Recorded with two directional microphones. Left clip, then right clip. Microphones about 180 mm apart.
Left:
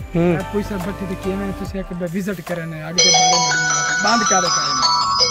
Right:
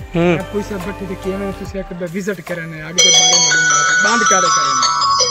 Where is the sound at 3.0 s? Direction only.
65° left (ahead or behind).